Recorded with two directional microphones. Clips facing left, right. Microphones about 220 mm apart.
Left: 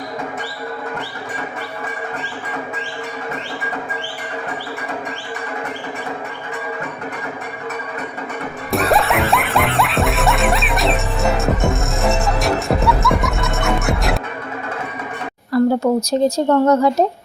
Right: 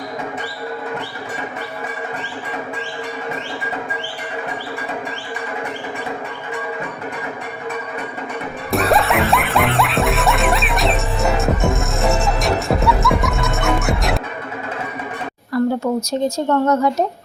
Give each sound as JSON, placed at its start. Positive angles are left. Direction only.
{"t": 8.7, "sound": "music", "side_deg": 0}
{"t": 15.5, "sound": "a sound", "side_deg": 35}
{"t": 16.0, "sound": "speech", "side_deg": 35}